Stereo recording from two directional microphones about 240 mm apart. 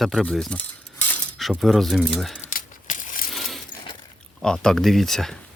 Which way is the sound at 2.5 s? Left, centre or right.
Left.